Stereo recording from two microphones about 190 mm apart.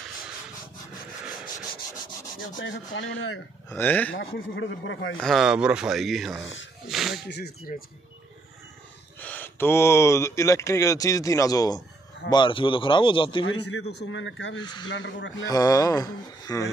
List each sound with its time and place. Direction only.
2.6 s speech: 85° left
3.7 s speech: 10° left (ahead or behind)
4.1 s speech: 80° left
5.2 s speech: centre (ahead or behind)
7.2 s speech: 60° left (ahead or behind)
9.2 s speech: 10° left (ahead or behind); by 13.5 s 25° left (ahead or behind)
13.5 s speech: 75° left (ahead or behind)
14.6 s speech: 25° left (ahead or behind)
14.9 s speech: 75° left (ahead or behind)
15.4 s speech: 20° left (ahead or behind)